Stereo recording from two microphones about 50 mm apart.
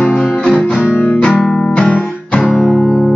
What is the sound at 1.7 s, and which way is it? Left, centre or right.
Guitar, centre.